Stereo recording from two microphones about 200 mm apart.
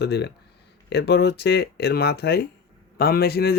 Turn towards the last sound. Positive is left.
turn(degrees=50)  # may be behind; listen again after turning